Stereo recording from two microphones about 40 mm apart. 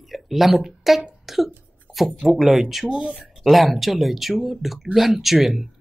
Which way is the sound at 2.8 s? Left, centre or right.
Centre.